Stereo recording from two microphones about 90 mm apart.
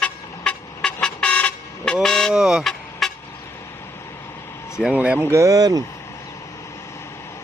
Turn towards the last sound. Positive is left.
turn(degrees=-45)  # may be behind; listen again after turning